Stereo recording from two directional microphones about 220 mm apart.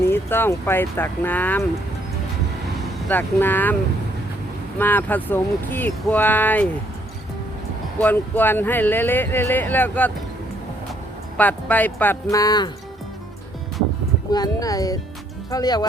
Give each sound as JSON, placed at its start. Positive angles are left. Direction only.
{"t": 0.1, "sound": "speech", "side_deg": 10}
{"t": 3.1, "sound": "speech", "side_deg": 10}
{"t": 4.8, "sound": "speech", "side_deg": 10}
{"t": 7.9, "sound": "speech", "side_deg": 10}
{"t": 11.3, "sound": "speech", "side_deg": 5}
{"t": 14.3, "sound": "speech", "side_deg": 15}